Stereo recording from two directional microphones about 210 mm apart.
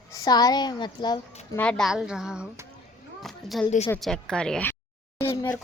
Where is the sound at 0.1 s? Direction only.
20° left (ahead or behind).